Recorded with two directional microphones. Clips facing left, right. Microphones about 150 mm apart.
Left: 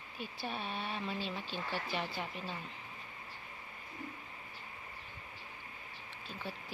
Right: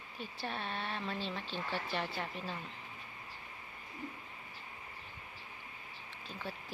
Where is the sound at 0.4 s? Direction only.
5° left (ahead or behind).